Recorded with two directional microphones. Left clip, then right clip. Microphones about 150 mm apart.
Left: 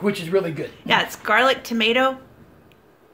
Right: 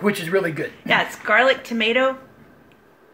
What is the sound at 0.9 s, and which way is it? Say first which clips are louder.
Speech: even; 15° left (ahead or behind).